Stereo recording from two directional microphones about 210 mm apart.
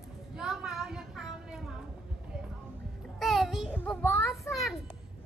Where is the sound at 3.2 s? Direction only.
Centre (ahead or behind).